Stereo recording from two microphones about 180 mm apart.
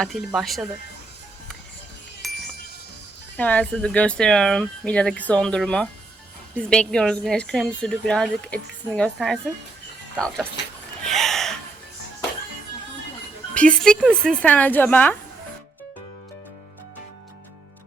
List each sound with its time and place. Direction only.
0.0 s a woman's voice: centre (ahead or behind)
2.2 s wind chime: centre (ahead or behind)
3.3 s a woman's voice: 10° left (ahead or behind)
11.0 s gasp: centre (ahead or behind)
13.5 s speech: 5° left (ahead or behind)